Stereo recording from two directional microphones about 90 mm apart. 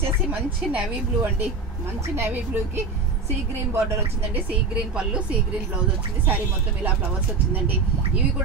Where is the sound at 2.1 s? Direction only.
25° right (ahead or behind).